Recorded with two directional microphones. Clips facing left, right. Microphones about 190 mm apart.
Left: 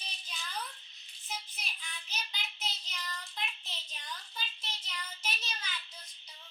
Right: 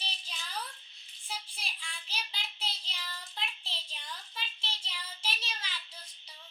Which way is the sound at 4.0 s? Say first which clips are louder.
Left 2 dB; 5° right (ahead or behind).